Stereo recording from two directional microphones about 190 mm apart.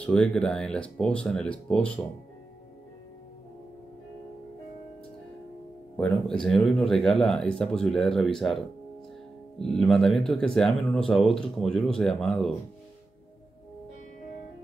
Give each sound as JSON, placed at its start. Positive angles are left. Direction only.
{"t": 0.0, "sound": "speech", "side_deg": 5}
{"t": 5.9, "sound": "speech", "side_deg": 5}